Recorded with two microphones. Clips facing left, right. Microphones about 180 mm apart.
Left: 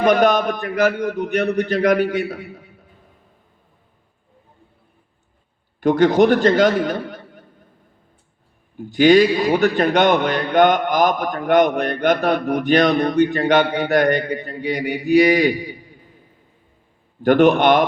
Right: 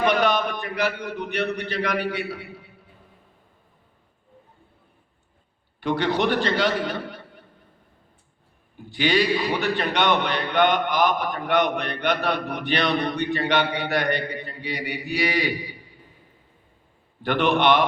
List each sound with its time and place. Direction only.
0.0 s a man's voice: 45° left (ahead or behind)
5.8 s a man's voice: 45° left (ahead or behind)
8.9 s a man's voice: 45° left (ahead or behind)
17.2 s a man's voice: 45° left (ahead or behind)